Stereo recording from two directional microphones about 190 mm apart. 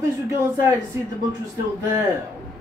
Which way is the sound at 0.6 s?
20° right (ahead or behind).